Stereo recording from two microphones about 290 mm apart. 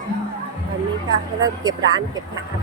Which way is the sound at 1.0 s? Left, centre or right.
Centre.